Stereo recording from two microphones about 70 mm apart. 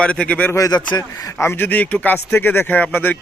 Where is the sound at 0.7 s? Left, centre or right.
Left.